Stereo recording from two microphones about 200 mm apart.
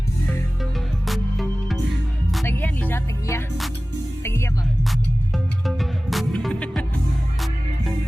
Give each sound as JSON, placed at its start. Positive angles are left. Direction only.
{"t": 0.6, "sound": "music", "side_deg": 0}
{"t": 4.9, "sound": "music", "side_deg": 0}